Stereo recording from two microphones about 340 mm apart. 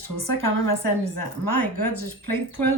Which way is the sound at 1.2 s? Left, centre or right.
Left.